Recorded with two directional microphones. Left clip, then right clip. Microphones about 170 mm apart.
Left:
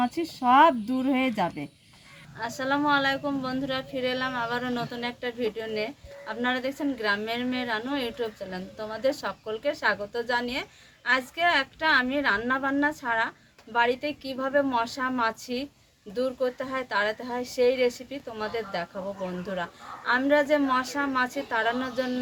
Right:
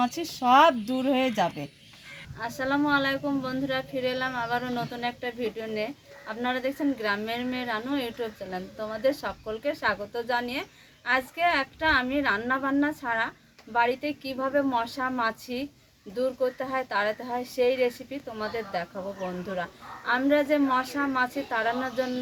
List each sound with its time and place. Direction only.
0.0 s speech: 30° right (ahead or behind)
2.6 s a woman's voice: 5° left (ahead or behind)